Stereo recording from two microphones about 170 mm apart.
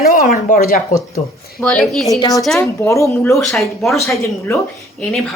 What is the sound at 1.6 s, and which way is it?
Speech, 5° left (ahead or behind).